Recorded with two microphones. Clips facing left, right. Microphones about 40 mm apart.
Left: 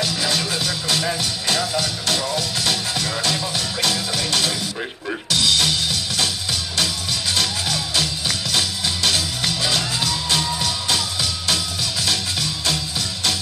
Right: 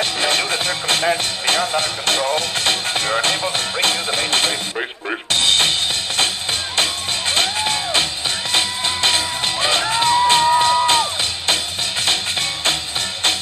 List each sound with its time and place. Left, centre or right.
0.0 s music: right